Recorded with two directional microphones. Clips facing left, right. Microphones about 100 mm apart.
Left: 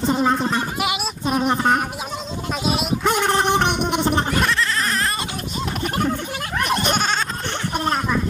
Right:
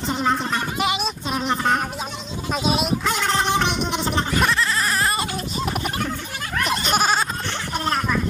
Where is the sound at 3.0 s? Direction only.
15° left (ahead or behind).